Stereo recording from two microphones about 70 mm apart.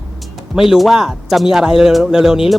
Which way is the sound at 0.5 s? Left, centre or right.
Centre.